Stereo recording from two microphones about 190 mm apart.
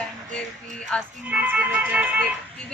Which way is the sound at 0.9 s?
5° left (ahead or behind).